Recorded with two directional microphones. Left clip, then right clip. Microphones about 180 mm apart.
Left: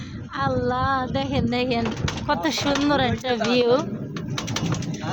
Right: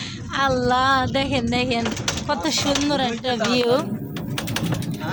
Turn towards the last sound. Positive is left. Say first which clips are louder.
# even
turn(degrees=10)  # may be behind; listen again after turning